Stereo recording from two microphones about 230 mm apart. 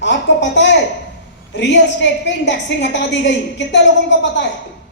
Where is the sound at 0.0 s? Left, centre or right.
Left.